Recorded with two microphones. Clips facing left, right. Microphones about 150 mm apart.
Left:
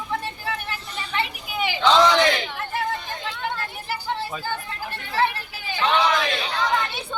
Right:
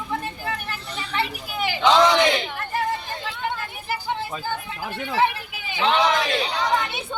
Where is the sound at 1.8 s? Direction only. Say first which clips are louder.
Even; 15° right (ahead or behind).